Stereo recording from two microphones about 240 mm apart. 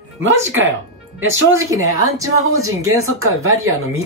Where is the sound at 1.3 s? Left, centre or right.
Right.